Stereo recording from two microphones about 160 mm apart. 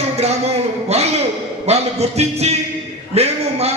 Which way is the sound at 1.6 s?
40° right (ahead or behind).